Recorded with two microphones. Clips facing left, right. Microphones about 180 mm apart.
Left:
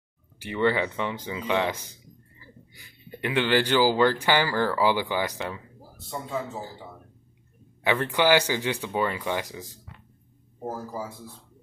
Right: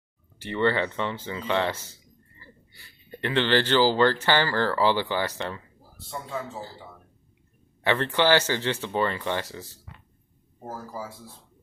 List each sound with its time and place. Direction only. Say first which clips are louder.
0.4 s speech: even; 10° left (ahead or behind)
7.8 s speech: even; 10° left (ahead or behind)